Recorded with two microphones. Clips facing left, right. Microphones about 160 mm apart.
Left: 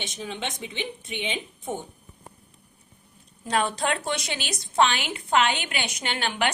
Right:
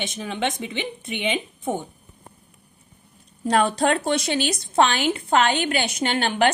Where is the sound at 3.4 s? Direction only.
40° right (ahead or behind).